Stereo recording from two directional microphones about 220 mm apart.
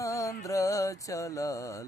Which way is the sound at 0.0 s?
15° left (ahead or behind).